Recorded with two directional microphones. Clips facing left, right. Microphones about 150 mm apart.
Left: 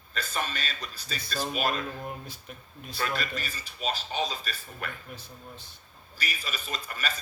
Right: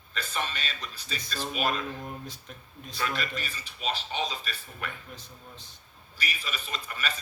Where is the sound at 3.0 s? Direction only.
40° left (ahead or behind).